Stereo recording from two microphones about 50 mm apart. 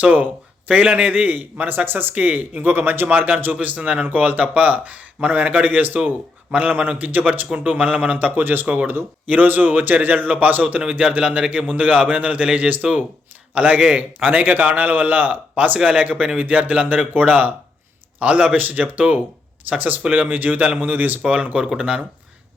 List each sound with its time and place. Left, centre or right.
0.0 s speech: right
8.6 s a man's voice: right
8.9 s a man's voice: right
21.2 s a man's voice: right